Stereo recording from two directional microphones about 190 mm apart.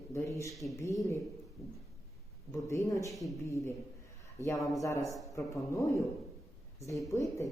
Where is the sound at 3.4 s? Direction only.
15° left (ahead or behind).